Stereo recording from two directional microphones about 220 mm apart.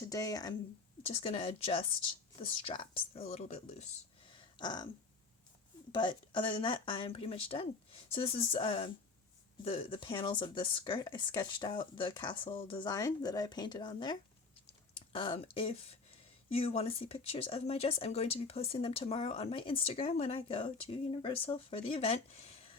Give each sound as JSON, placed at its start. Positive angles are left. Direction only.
{"t": 0.1, "sound": "speech", "side_deg": 15}
{"t": 5.9, "sound": "speech", "side_deg": 20}